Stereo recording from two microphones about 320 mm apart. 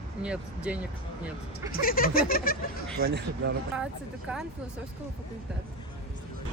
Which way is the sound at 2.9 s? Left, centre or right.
Right.